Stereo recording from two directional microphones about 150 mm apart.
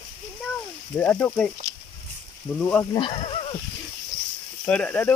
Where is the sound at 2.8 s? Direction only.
30° left (ahead or behind).